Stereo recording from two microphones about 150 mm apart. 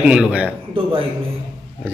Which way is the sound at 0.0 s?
5° right (ahead or behind).